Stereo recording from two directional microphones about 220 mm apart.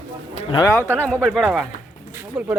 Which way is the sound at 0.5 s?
15° left (ahead or behind).